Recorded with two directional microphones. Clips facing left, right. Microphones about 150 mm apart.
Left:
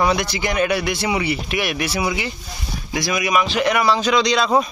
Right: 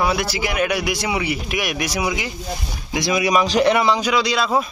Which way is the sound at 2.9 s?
20° right (ahead or behind).